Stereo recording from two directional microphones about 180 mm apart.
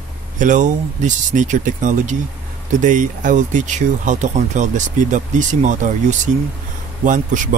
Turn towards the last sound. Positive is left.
turn(degrees=-45)  # may be behind; listen again after turning